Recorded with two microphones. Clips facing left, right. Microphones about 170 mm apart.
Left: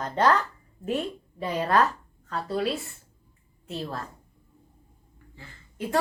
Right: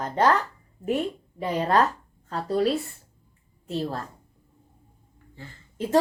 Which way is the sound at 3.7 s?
35° right (ahead or behind).